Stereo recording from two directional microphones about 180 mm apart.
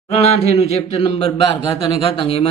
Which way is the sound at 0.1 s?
35° left (ahead or behind).